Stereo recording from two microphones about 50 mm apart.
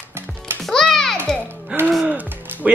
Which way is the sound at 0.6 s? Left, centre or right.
Centre.